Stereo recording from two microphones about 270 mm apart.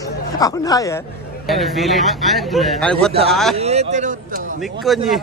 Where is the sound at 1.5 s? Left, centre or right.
Centre.